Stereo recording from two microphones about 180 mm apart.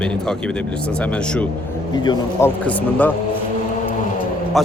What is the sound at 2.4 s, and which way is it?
Speech, 10° left (ahead or behind).